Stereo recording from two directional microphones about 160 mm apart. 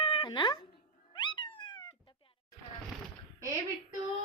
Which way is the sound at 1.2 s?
30° left (ahead or behind).